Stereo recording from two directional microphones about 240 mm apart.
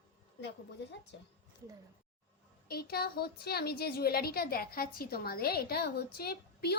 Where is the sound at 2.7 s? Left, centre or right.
Left.